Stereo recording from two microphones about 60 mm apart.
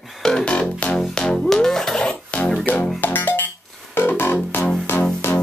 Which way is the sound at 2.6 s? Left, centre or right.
Left.